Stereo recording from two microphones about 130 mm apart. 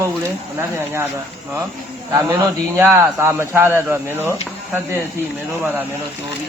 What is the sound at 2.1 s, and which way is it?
A man's voice, 20° right (ahead or behind).